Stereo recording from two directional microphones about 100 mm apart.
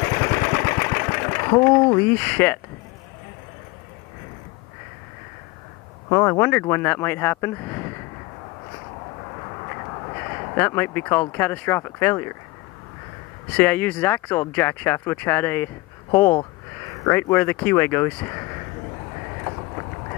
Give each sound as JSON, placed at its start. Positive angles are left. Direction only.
{"t": 0.0, "sound": "sewing machine", "side_deg": 20}
{"t": 2.0, "sound": "speech", "side_deg": 20}
{"t": 6.0, "sound": "speech", "side_deg": 30}
{"t": 10.0, "sound": "speech", "side_deg": 30}
{"t": 13.6, "sound": "speech", "side_deg": 15}